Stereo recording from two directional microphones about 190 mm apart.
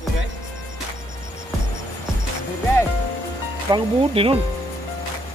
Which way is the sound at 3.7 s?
30° right (ahead or behind).